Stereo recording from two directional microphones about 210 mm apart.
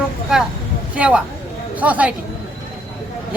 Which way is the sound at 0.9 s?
5° right (ahead or behind).